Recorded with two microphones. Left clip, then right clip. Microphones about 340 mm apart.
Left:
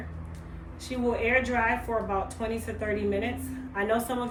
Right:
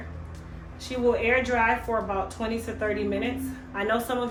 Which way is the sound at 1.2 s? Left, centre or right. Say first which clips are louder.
Right 2 dB; centre.